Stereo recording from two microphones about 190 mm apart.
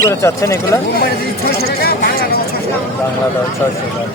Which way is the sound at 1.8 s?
55° left (ahead or behind).